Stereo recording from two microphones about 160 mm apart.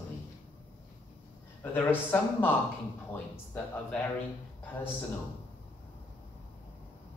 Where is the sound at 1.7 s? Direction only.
10° left (ahead or behind).